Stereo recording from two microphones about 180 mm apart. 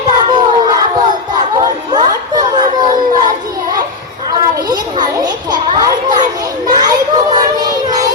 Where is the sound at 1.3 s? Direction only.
20° right (ahead or behind).